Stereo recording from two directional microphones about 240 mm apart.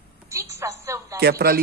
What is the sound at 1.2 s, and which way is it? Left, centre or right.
Speech, right.